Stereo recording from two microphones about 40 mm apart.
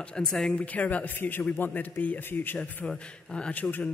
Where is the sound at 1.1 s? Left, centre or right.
Left.